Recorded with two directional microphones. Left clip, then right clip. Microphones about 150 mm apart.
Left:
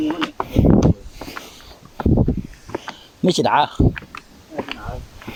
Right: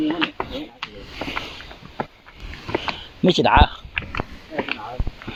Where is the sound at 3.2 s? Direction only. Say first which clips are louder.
Right 1 dB; 30° left (ahead or behind).